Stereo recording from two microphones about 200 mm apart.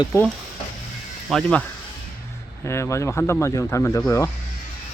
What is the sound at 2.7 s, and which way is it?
Speech, 15° left (ahead or behind).